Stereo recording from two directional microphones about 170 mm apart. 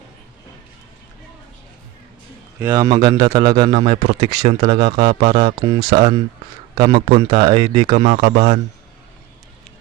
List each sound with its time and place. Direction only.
2.6 s a man's voice: 15° right (ahead or behind); by 8.6 s 40° right (ahead or behind)